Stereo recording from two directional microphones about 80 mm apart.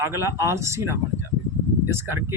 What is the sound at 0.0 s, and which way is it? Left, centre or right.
Speech, right.